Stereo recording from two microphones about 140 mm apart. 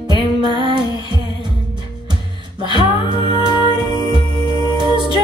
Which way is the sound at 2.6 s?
35° left (ahead or behind).